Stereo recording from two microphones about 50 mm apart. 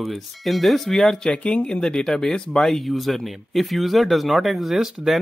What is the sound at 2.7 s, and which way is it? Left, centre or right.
Speech, centre.